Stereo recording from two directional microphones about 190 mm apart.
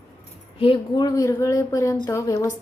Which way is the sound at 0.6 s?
25° left (ahead or behind).